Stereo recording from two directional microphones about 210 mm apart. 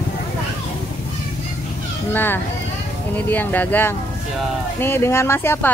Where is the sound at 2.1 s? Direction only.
10° left (ahead or behind).